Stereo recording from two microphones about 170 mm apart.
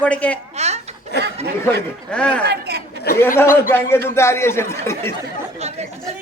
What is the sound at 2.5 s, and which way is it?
Chatter, 70° right (ahead or behind).